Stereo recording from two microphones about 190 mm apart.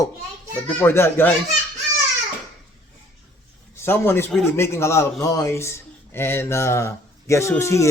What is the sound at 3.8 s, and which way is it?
A man's voice, 10° left (ahead or behind).